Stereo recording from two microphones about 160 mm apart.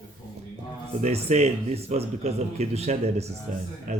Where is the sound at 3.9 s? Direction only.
55° right (ahead or behind).